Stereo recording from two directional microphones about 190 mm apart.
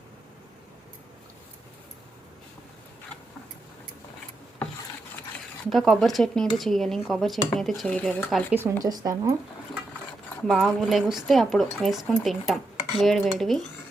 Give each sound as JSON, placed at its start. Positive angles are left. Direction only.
{"t": 5.7, "sound": "speech", "side_deg": 0}
{"t": 8.5, "sound": "speech", "side_deg": -15}
{"t": 10.2, "sound": "speech", "side_deg": 0}